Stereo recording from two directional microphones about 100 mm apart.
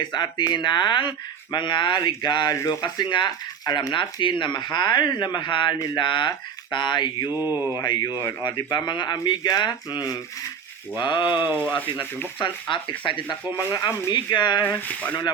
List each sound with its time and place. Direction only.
0.0 s speech: 50° left (ahead or behind)
7.3 s speech: 20° right (ahead or behind)
7.9 s speech: 50° left (ahead or behind)
8.2 s speech: 25° left (ahead or behind)
8.4 s speech: 50° left (ahead or behind)
14.6 s speech: 20° left (ahead or behind)